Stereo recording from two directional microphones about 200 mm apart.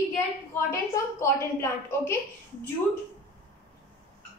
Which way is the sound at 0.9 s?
15° left (ahead or behind).